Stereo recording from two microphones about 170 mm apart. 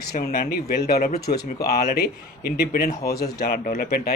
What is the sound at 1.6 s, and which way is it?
Speech, 65° left (ahead or behind).